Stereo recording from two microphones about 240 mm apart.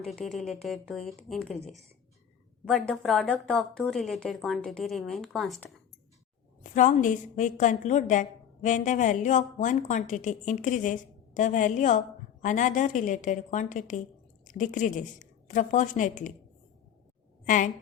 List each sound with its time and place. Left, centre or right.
0.0 s a woman's voice: centre
6.6 s a woman's voice: left
17.4 s a woman's voice: left